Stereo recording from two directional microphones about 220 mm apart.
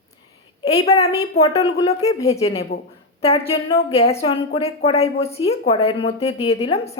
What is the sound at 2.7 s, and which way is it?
Speech, 45° left (ahead or behind).